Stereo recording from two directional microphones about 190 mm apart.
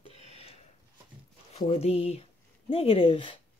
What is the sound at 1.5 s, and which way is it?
Speech, 30° left (ahead or behind).